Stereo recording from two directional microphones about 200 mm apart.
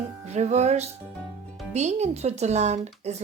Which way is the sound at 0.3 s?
35° right (ahead or behind).